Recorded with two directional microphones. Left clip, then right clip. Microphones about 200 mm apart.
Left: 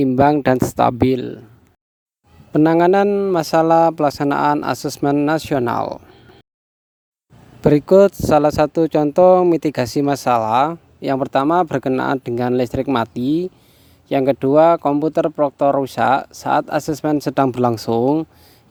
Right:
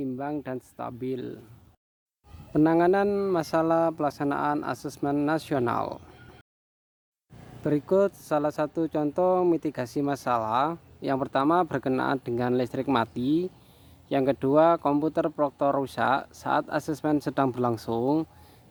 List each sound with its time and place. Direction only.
0.0 s speech: 55° left (ahead or behind); by 1.5 s 35° left (ahead or behind)
2.5 s speech: 40° left (ahead or behind)
7.6 s speech: 45° left (ahead or behind); by 18.3 s 25° left (ahead or behind)